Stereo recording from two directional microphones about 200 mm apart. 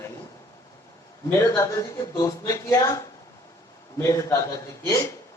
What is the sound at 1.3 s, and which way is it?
Speech, 15° left (ahead or behind).